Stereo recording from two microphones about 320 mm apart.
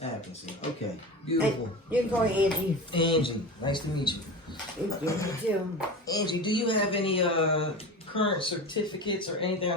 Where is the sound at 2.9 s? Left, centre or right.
Centre.